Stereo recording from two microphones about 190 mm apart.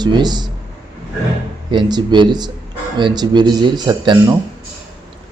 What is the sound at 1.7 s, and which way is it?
A man's voice, 25° right (ahead or behind).